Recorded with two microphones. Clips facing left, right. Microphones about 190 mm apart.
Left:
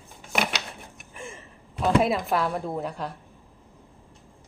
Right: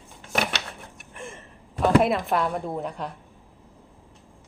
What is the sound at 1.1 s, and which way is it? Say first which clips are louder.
Gasp: right 1 dB; centre (ahead or behind).